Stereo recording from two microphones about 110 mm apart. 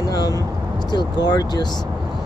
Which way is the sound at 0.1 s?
35° left (ahead or behind).